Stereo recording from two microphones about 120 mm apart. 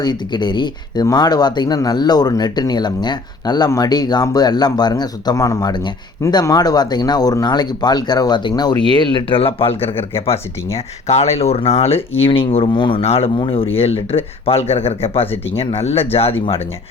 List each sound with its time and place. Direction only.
0.0 s speech: 35° left (ahead or behind); by 16.0 s 55° left (ahead or behind)